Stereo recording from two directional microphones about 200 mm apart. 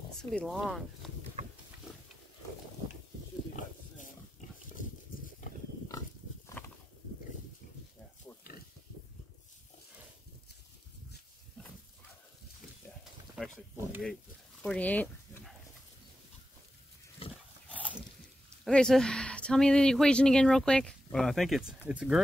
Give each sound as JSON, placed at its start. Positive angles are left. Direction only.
{"t": 0.2, "sound": "speech", "side_deg": 0}
{"t": 6.6, "sound": "a sound", "side_deg": 10}
{"t": 13.4, "sound": "speech", "side_deg": 0}
{"t": 14.6, "sound": "a sound", "side_deg": 5}
{"t": 17.2, "sound": "dog", "side_deg": 30}
{"t": 17.6, "sound": "dog", "side_deg": -5}
{"t": 18.6, "sound": "speech", "side_deg": 5}